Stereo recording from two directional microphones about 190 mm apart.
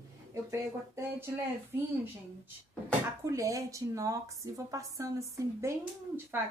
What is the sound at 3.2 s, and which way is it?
A woman's voice, 15° right (ahead or behind).